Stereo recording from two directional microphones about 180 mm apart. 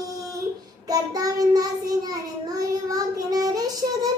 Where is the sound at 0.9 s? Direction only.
20° right (ahead or behind).